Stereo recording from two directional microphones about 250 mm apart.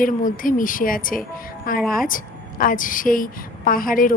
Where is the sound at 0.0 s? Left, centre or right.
Left.